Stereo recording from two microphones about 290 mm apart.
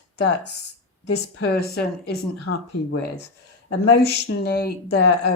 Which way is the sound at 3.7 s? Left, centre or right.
Left.